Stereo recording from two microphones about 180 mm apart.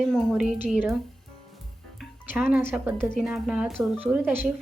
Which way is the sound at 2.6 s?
10° right (ahead or behind).